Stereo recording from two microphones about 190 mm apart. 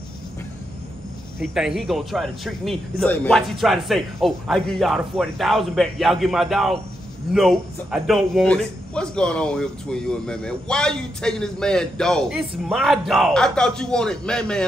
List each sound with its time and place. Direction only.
1.4 s a man's voice: 5° right (ahead or behind)